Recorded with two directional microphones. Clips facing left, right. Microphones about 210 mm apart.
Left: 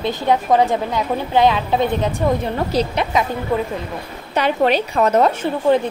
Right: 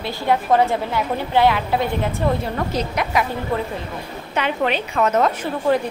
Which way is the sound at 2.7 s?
35° left (ahead or behind).